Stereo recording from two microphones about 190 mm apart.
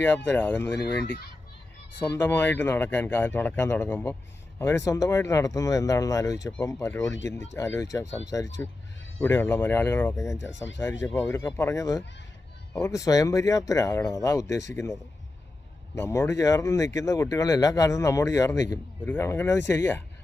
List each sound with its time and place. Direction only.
0.3 s speech: 10° left (ahead or behind)
16.0 s speech: 15° left (ahead or behind)